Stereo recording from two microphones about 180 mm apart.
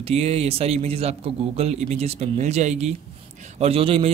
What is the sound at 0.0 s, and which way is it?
A man's voice, 35° right (ahead or behind).